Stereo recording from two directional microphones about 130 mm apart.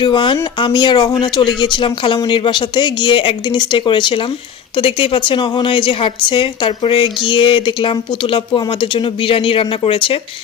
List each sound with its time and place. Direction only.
0.0 s a woman's voice: 40° left (ahead or behind)